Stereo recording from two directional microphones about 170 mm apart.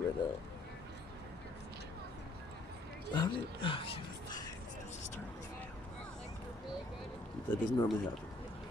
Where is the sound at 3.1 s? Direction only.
30° left (ahead or behind).